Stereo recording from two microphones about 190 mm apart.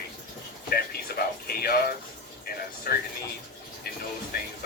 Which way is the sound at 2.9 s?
50° left (ahead or behind).